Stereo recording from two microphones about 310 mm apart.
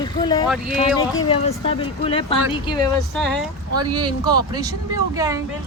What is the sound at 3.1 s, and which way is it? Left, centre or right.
Speech, centre.